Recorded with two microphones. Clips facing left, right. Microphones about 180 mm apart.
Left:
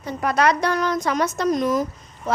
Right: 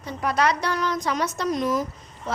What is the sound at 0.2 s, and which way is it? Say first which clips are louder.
A woman's voice: left 3 dB; 50° left (ahead or behind).